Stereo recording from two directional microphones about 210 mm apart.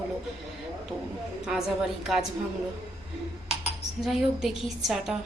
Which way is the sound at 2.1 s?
Centre (ahead or behind).